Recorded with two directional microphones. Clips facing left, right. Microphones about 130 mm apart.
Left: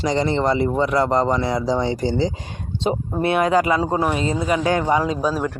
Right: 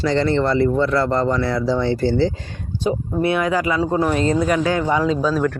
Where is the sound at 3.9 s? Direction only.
15° left (ahead or behind).